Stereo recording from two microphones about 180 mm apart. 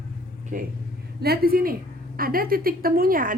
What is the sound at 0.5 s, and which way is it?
Speech, 45° right (ahead or behind).